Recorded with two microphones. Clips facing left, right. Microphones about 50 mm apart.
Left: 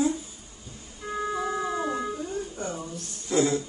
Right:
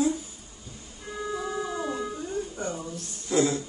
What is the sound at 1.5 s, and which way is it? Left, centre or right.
Howl, left.